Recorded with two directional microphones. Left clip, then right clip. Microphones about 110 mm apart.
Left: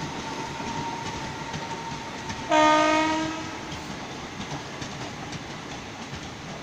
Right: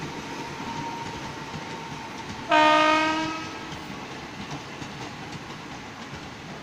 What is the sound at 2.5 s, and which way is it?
Train, 25° right (ahead or behind).